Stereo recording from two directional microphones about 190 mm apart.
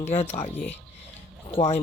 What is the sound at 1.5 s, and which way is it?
Speech, 35° left (ahead or behind).